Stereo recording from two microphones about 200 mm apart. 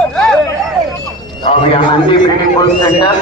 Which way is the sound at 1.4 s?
25° left (ahead or behind).